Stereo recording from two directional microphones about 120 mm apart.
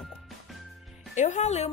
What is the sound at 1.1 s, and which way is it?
Speech, 80° left.